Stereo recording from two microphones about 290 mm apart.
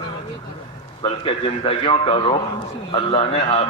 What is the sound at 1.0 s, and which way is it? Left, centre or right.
A man's voice, centre.